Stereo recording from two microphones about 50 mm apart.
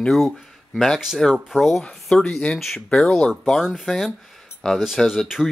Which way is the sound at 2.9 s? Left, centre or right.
Centre.